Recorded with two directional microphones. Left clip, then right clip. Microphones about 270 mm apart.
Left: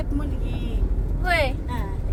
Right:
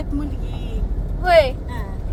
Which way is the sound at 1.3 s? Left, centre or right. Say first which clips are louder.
Right 9 dB; right.